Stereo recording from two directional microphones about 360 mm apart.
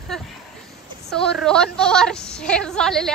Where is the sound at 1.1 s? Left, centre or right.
Centre.